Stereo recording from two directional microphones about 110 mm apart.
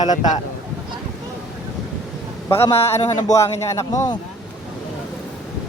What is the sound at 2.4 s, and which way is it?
A man's voice, 25° left (ahead or behind).